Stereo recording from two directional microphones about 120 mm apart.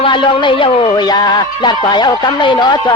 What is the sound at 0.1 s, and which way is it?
A man's voice, 45° left (ahead or behind).